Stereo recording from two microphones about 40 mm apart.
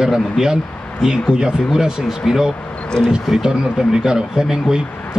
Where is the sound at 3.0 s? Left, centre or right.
Centre.